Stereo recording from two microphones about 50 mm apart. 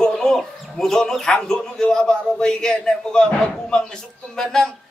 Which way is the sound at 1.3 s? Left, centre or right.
Centre.